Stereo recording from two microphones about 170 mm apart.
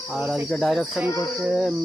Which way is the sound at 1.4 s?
5° right (ahead or behind).